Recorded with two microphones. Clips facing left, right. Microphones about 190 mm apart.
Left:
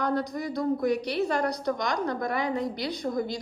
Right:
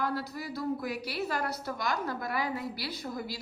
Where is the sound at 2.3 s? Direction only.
5° right (ahead or behind).